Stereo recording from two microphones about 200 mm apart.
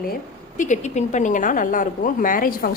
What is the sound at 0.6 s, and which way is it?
A woman's voice, 35° left (ahead or behind).